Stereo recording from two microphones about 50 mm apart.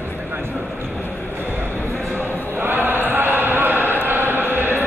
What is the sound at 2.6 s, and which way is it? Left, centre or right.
Chant, right.